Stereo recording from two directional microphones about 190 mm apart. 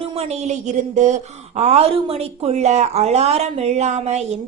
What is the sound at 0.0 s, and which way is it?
A woman's voice, 35° right (ahead or behind).